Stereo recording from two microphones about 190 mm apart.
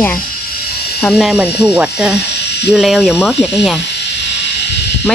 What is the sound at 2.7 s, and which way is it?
Speech, centre (ahead or behind).